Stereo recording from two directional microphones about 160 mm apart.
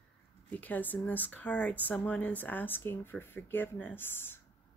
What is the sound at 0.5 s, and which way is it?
Speech, 10° left (ahead or behind).